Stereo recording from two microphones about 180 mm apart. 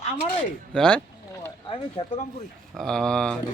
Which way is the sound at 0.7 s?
5° left (ahead or behind).